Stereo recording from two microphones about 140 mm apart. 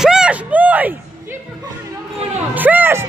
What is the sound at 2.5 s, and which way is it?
Music, 10° right (ahead or behind).